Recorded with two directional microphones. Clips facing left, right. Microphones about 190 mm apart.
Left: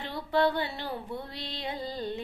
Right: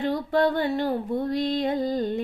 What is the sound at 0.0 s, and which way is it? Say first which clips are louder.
Music: right 5 dB; 45° right (ahead or behind).